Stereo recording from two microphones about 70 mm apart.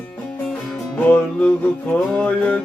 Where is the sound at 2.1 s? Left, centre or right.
Left.